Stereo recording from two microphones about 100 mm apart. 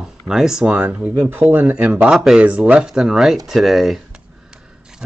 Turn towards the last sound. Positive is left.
turn(degrees=-5)  # may be behind; listen again after turning